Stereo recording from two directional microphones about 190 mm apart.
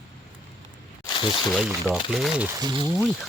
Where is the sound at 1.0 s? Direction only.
25° left (ahead or behind).